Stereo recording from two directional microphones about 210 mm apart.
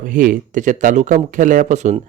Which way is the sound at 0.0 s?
40° right (ahead or behind).